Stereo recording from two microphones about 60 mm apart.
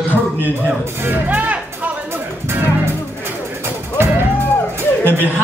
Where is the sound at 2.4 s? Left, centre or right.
Right.